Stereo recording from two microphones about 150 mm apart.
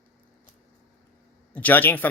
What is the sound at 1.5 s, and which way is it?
Speech, 10° left (ahead or behind).